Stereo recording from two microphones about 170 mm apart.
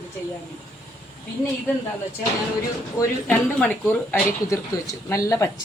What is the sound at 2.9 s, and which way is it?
A woman's voice, 15° left (ahead or behind).